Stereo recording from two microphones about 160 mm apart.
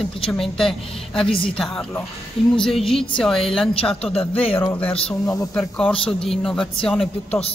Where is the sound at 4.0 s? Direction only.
40° left (ahead or behind).